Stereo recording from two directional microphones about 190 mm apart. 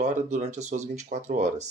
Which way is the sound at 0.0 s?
40° right (ahead or behind).